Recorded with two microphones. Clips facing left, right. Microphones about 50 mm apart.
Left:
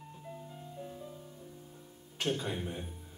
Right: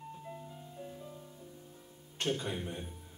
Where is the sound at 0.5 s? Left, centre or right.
Centre.